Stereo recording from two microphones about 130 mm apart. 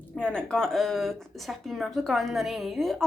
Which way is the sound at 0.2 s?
5° left (ahead or behind).